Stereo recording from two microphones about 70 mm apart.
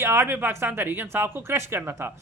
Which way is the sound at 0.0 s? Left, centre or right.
Right.